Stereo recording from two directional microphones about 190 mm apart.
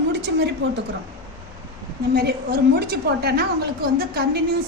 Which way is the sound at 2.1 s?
55° right (ahead or behind).